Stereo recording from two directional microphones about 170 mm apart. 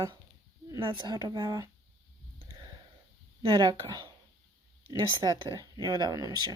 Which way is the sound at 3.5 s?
20° right (ahead or behind).